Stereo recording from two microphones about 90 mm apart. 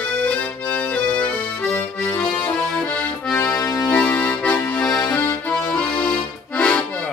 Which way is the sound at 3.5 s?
40° left (ahead or behind).